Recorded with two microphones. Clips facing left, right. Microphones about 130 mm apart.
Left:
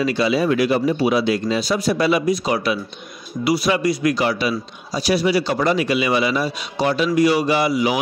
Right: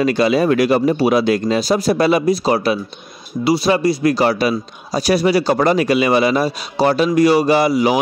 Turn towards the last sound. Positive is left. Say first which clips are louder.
# right 4 dB
turn(degrees=-40)  # may be behind; listen again after turning